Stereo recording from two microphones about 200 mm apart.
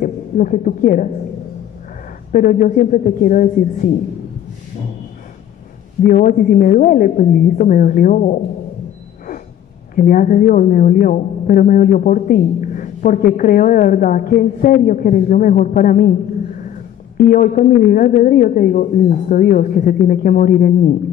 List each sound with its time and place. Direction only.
0.0 s a woman's voice: 40° left (ahead or behind)
2.3 s speech: 40° left (ahead or behind)
6.0 s speech: 40° left (ahead or behind)
9.9 s speech: 45° left (ahead or behind)
17.2 s speech: 40° left (ahead or behind)